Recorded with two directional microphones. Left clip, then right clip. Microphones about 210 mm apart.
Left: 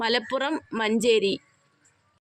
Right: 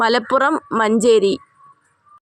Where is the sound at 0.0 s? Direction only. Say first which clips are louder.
Right 10 dB; 25° right (ahead or behind).